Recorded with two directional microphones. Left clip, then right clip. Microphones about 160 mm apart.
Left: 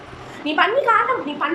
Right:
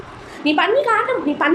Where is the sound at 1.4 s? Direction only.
45° right (ahead or behind).